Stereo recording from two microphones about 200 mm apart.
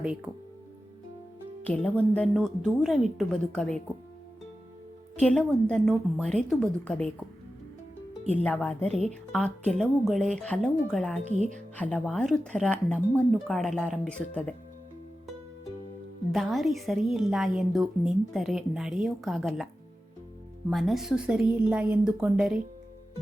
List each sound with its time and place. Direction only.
1.6 s a woman's voice: 5° left (ahead or behind)
5.2 s a woman's voice: 5° left (ahead or behind)
8.3 s a woman's voice: 5° left (ahead or behind)
11.2 s speech: 35° right (ahead or behind)
11.8 s a woman's voice: 5° left (ahead or behind)
16.3 s a woman's voice: centre (ahead or behind)
20.7 s a woman's voice: centre (ahead or behind)